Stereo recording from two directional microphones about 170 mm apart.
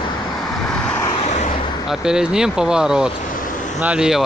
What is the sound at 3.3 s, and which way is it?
Vehicle, 50° left (ahead or behind).